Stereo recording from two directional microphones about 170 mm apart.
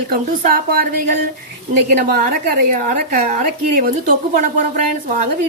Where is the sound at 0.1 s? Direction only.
60° right (ahead or behind).